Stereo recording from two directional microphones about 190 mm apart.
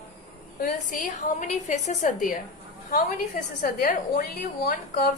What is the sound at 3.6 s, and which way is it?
Speech, 50° left (ahead or behind).